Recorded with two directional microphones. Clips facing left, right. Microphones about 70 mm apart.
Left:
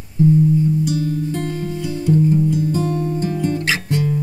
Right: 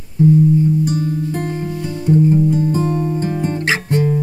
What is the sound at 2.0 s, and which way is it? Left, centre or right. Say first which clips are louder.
Music: right 3 dB; right.